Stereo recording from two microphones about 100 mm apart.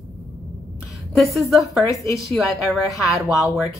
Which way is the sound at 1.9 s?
35° left (ahead or behind).